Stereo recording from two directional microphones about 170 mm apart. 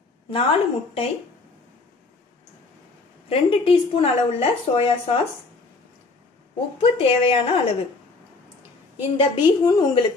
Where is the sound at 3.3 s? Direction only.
35° left (ahead or behind).